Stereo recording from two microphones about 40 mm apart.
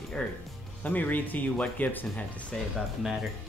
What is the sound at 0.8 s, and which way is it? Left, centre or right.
Speech, left.